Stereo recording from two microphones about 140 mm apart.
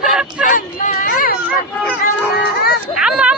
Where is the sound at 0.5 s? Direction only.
70° left (ahead or behind); by 1.4 s 90° left.